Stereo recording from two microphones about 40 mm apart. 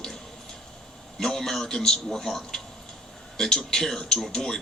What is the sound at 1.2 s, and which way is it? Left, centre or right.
A man's voice, centre.